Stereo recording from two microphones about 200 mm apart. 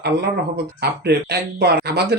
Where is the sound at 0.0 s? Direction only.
55° right (ahead or behind).